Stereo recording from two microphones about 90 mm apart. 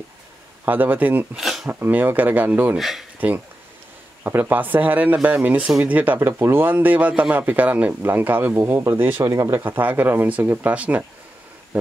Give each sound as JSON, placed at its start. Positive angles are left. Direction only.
{"t": 0.7, "sound": "speech", "side_deg": -20}
{"t": 1.3, "sound": "speech", "side_deg": -5}
{"t": 1.7, "sound": "speech", "side_deg": -20}
{"t": 2.8, "sound": "speech", "side_deg": 0}
{"t": 3.2, "sound": "speech", "side_deg": -20}
{"t": 9.2, "sound": "speech", "side_deg": -45}
{"t": 9.5, "sound": "speech", "side_deg": -25}
{"t": 11.7, "sound": "wild animals", "side_deg": -15}